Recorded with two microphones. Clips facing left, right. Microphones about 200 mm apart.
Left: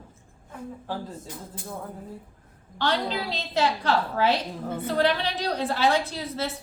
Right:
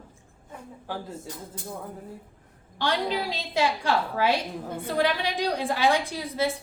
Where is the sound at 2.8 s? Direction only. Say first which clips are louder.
Even; 10° right (ahead or behind).